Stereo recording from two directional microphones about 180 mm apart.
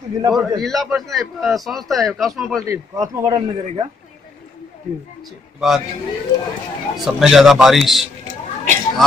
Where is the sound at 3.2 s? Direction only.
30° right (ahead or behind).